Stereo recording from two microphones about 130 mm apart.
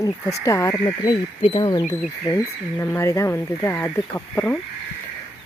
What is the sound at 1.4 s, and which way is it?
Speech, 45° left (ahead or behind).